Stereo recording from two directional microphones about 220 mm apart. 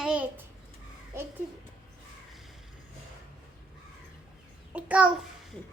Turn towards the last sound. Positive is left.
turn(degrees=-5)  # may be behind; listen again after turning